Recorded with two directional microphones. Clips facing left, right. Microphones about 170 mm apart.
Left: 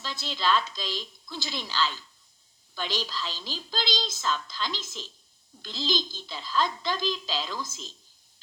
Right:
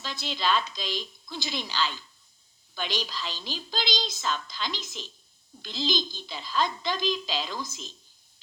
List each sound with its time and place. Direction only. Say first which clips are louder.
0.0 s a woman's voice: even; 15° right (ahead or behind)